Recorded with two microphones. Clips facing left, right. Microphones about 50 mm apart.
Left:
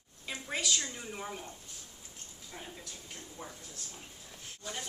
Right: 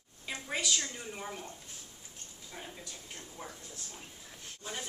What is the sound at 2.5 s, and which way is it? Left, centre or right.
Speech, centre.